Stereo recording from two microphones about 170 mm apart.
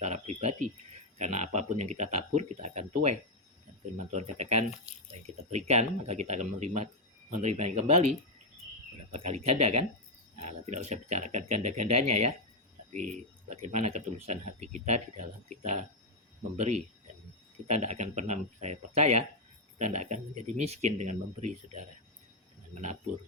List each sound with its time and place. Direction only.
0.0 s speech: 40° right (ahead or behind)
9.1 s speech: 40° right (ahead or behind)